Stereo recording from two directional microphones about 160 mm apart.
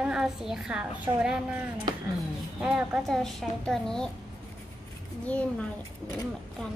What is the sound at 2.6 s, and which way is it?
A child's voice, 5° right (ahead or behind).